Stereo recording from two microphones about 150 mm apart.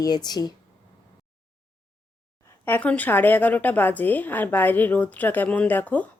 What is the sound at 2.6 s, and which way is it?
Speech, 10° left (ahead or behind).